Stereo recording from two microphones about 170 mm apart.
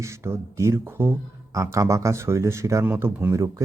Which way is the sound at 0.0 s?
15° right (ahead or behind).